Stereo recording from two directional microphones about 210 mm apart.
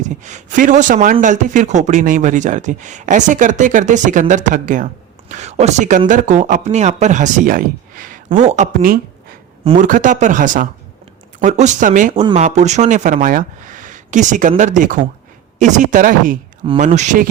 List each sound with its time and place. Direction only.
0.0 s speech: 35° right (ahead or behind)